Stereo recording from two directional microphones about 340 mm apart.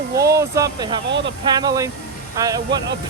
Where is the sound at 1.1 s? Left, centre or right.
Right.